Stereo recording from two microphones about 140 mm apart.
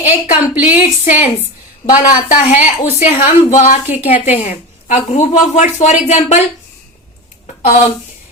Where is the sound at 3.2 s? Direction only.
60° left (ahead or behind).